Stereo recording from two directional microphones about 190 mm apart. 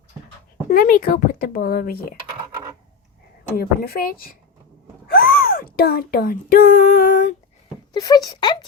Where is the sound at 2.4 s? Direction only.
20° right (ahead or behind).